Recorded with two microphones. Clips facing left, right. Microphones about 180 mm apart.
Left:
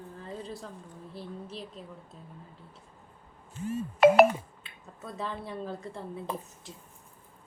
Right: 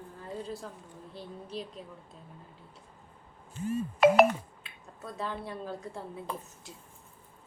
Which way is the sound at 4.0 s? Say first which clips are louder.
Left 2 dB; centre (ahead or behind).